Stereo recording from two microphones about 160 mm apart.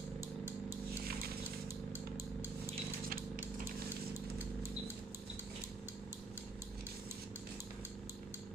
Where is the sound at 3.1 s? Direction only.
60° right (ahead or behind).